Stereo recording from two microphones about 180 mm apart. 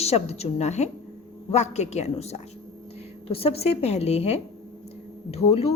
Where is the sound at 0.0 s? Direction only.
35° left (ahead or behind).